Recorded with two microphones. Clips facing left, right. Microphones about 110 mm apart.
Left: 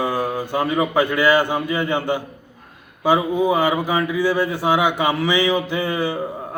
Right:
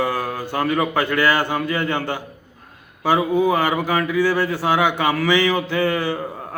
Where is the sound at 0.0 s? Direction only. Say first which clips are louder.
Left 1 dB; 20° left (ahead or behind).